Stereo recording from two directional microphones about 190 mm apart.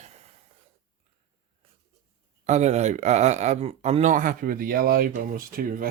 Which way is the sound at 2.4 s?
35° right (ahead or behind).